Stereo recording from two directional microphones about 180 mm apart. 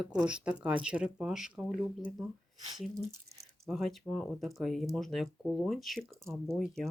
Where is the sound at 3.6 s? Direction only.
Centre (ahead or behind).